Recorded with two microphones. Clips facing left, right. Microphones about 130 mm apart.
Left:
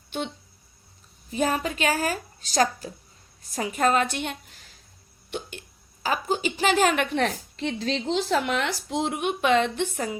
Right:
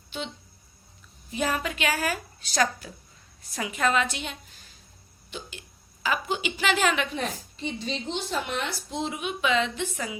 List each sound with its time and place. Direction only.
1.3 s a woman's voice: 35° left (ahead or behind); by 4.5 s 55° left (ahead or behind)
5.3 s hiccup: 65° left (ahead or behind)
6.0 s a woman's voice: 35° left (ahead or behind)